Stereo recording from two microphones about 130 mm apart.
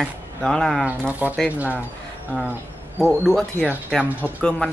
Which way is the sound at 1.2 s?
10° right (ahead or behind).